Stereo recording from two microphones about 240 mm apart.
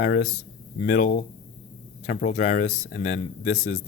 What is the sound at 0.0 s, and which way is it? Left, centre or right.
A woman's voice, left.